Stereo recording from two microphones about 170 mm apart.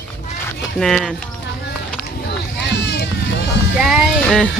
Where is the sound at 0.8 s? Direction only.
5° left (ahead or behind).